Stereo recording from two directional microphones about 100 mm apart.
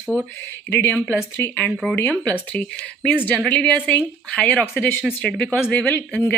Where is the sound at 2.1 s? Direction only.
15° left (ahead or behind).